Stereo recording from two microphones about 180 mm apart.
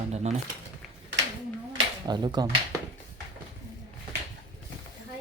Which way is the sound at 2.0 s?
25° right (ahead or behind).